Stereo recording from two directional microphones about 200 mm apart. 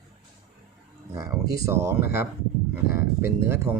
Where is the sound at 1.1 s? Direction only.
15° right (ahead or behind).